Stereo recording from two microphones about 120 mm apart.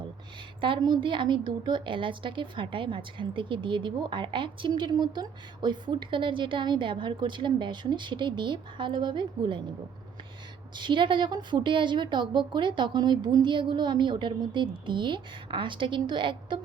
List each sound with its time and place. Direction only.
0.6 s a woman's voice: 40° right (ahead or behind)
10.8 s a woman's voice: 40° right (ahead or behind)